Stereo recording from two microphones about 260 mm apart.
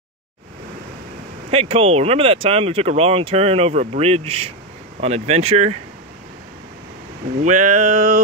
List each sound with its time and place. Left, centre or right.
1.5 s speech: right
7.4 s speech: right